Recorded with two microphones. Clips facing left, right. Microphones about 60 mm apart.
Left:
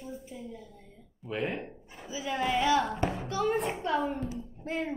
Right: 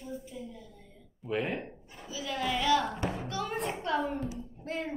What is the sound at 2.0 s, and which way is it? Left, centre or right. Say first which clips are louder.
Speech: left 3 dB; left.